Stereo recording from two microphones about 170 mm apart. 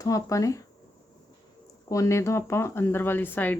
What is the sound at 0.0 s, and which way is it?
Speech, 20° left (ahead or behind).